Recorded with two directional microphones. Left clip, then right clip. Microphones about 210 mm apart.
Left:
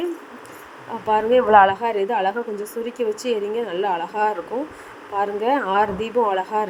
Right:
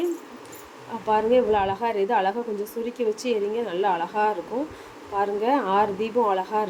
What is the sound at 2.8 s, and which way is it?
Speech, 45° left (ahead or behind).